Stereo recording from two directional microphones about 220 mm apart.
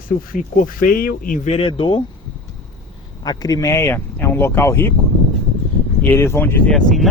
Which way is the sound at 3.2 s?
15° left (ahead or behind).